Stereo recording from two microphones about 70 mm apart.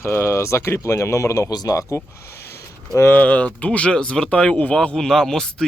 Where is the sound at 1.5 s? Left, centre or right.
Left.